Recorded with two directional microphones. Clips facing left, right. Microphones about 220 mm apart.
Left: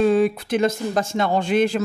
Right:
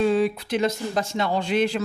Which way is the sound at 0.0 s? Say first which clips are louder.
Left 3 dB; 50° left (ahead or behind).